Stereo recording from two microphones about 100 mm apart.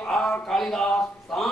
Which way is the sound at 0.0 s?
10° left (ahead or behind).